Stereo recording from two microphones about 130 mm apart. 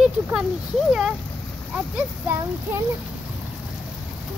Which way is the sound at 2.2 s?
20° right (ahead or behind).